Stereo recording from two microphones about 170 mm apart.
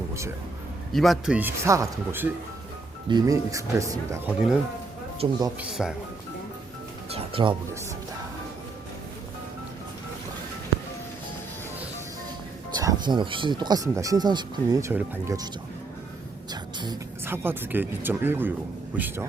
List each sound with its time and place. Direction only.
0.9 s speech: centre (ahead or behind); by 4.2 s 20° right (ahead or behind)
5.2 s speech: 30° right (ahead or behind)
5.5 s speech: 5° right (ahead or behind)
7.1 s music: 35° right (ahead or behind)
12.7 s speech: 25° right (ahead or behind)
16.5 s a sound: 25° right (ahead or behind)
17.2 s speech: 15° right (ahead or behind)